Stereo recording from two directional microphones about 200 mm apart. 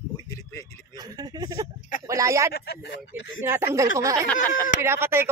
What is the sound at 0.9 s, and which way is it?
Speech, 20° right (ahead or behind).